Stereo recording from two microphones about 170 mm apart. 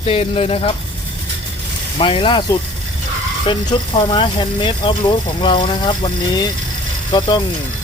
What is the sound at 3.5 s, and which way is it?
Speech, 25° left (ahead or behind).